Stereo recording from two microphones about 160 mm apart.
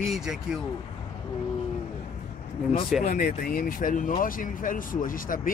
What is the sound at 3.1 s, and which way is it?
A man's voice, 60° left (ahead or behind).